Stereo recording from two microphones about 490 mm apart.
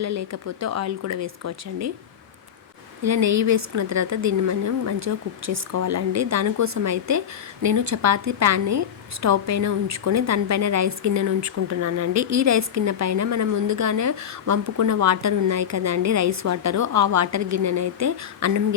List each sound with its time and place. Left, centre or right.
0.0 s a woman's voice: right
3.0 s a woman's voice: right